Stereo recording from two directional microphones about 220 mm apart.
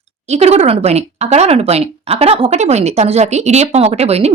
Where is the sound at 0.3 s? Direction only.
30° right (ahead or behind).